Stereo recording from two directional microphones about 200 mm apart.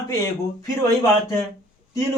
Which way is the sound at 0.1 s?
15° left (ahead or behind).